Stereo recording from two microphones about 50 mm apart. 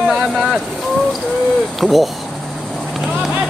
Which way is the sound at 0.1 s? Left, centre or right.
Centre.